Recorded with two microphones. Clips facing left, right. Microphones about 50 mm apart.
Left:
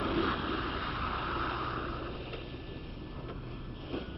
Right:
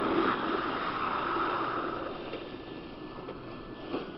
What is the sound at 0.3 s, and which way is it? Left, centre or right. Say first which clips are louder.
Vehicle: right 4 dB; centre.